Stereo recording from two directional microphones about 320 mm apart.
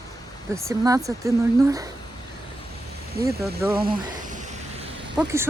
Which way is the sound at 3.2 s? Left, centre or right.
Centre.